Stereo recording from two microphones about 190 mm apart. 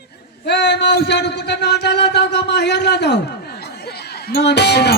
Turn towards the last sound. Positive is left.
turn(degrees=60)  # may be behind; listen again after turning